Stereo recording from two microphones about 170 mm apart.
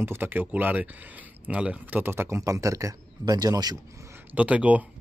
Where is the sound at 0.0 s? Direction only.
15° right (ahead or behind).